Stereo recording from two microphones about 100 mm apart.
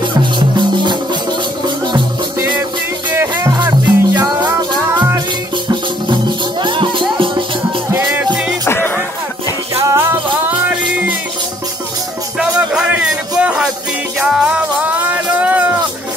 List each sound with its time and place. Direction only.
0.2 s music: 50° right (ahead or behind)
3.1 s music: 25° right (ahead or behind)
3.5 s music: 45° right (ahead or behind)
6.6 s music: 55° right (ahead or behind)
7.9 s music: 20° right (ahead or behind)
8.6 s music: 25° left (ahead or behind)
9.8 s music: 25° right (ahead or behind)
12.4 s music: 10° right (ahead or behind)